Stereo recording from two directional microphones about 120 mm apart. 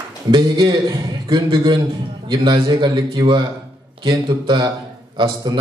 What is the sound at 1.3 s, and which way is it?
A man's voice, 40° right (ahead or behind).